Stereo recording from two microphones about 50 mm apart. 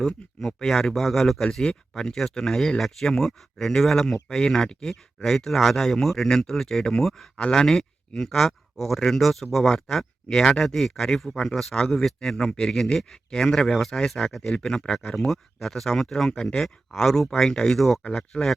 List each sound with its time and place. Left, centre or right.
0.0 s speech: centre
14.5 s speech: centre
14.9 s speech: centre